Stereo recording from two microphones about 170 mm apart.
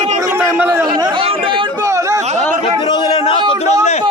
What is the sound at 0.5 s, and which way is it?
Speech, 15° right (ahead or behind).